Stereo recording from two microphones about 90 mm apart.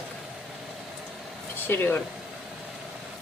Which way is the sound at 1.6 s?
25° left (ahead or behind).